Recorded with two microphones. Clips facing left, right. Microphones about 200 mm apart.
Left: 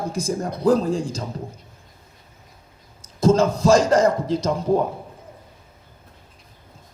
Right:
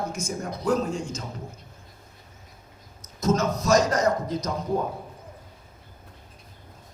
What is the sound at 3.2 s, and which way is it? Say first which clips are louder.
A man's voice: left 7 dB; 30° left (ahead or behind).